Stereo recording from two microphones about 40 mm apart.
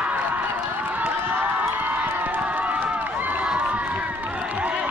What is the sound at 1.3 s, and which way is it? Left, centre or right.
Crowd, right.